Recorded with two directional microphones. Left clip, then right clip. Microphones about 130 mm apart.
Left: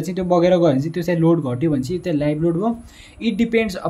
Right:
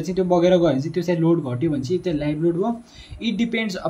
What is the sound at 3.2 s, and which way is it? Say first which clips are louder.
Speech: left 5 dB; 40° left (ahead or behind).